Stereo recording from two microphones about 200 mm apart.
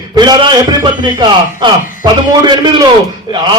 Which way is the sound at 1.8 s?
40° left (ahead or behind).